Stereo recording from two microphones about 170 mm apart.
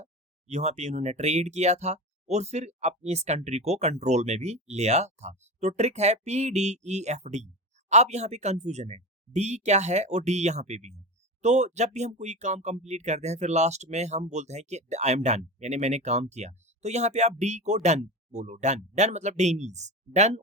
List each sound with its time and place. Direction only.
0.0 s speech: 40° right (ahead or behind)